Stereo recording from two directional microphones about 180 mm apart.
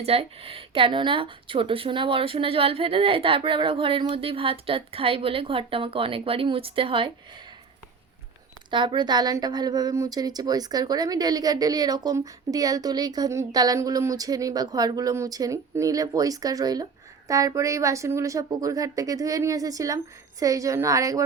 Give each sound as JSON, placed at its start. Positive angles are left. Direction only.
{"t": 0.0, "sound": "a woman's voice", "side_deg": -35}
{"t": 8.7, "sound": "a woman's voice", "side_deg": -25}